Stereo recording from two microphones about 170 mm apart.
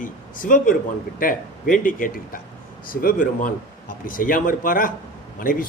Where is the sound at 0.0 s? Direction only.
50° left (ahead or behind).